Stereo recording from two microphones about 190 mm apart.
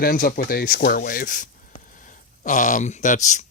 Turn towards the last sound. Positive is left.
turn(degrees=40)  # may be behind; listen again after turning